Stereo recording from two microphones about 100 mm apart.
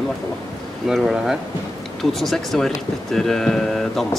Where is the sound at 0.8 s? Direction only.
5° right (ahead or behind).